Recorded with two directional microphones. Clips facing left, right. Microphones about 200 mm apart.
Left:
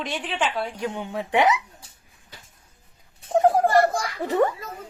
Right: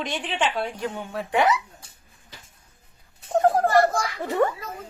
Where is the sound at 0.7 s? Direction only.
15° left (ahead or behind).